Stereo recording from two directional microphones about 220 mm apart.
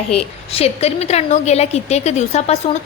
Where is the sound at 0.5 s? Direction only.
30° left (ahead or behind).